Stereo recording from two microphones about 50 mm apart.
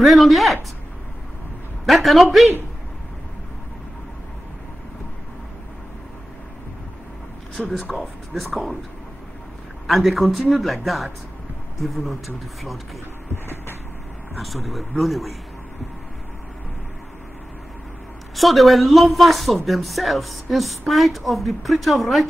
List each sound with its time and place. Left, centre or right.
0.0 s a man's voice: centre
1.9 s a man's voice: centre
7.5 s speech: centre
9.8 s a man's voice: centre
14.4 s a man's voice: centre
18.3 s a man's voice: centre